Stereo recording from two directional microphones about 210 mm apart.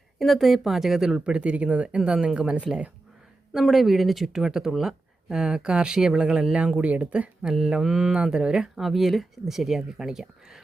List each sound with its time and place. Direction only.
0.2 s speech: centre (ahead or behind)